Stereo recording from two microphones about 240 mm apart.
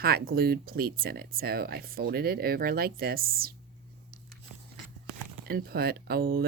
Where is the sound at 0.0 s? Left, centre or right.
Right.